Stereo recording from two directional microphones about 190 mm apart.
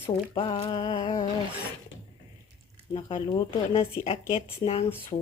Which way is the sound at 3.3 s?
30° left (ahead or behind).